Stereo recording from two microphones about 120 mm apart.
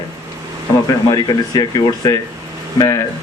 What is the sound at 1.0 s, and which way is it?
A man's voice, 35° left (ahead or behind).